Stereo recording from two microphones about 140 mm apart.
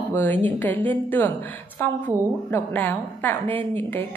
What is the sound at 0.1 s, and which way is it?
A woman's voice, 15° left (ahead or behind).